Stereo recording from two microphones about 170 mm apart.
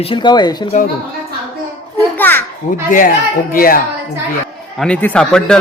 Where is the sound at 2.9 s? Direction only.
55° left (ahead or behind).